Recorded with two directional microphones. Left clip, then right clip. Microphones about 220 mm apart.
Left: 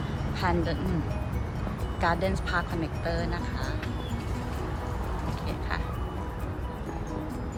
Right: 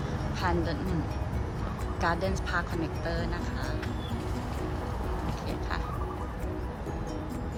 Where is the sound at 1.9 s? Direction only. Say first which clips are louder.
Left 2 dB; 20° right (ahead or behind).